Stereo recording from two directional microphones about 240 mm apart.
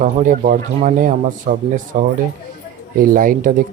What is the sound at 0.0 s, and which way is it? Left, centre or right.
Speech, right.